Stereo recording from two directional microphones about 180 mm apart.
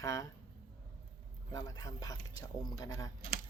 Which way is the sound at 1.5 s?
20° left (ahead or behind).